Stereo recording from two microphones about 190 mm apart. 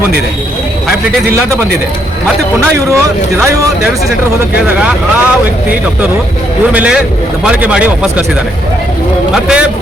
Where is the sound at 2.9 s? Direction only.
15° right (ahead or behind).